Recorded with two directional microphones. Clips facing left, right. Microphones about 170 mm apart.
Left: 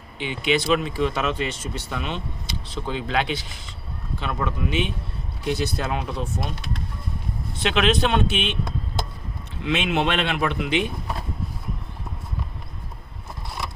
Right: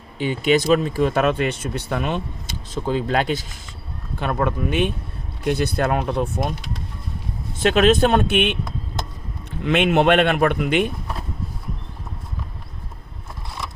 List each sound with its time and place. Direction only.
0.2 s speech: 45° right (ahead or behind)
7.6 s speech: 45° right (ahead or behind)
9.6 s speech: 55° right (ahead or behind)